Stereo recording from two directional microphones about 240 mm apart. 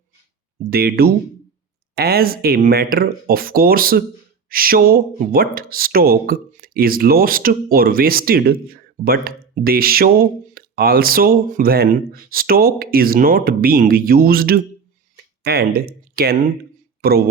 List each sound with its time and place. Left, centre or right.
0.6 s speech: right